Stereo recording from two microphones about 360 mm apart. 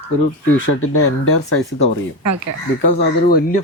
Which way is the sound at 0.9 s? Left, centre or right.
Left.